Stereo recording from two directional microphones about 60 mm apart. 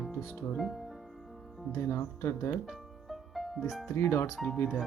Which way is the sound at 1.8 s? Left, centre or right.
Left.